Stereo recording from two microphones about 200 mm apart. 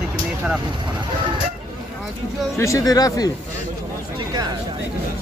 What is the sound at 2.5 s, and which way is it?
Speech, 15° left (ahead or behind).